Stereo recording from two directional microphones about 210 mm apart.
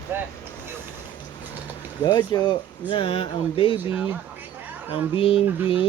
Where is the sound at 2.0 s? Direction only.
20° left (ahead or behind).